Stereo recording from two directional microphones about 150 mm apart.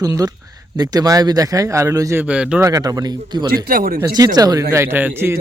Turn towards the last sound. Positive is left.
turn(degrees=-15)  # may be behind; listen again after turning